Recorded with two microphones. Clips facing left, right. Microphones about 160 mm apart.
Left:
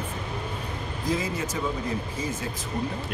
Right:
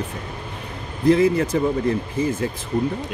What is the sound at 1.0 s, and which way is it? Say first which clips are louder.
Speech: right 13 dB; 60° right (ahead or behind).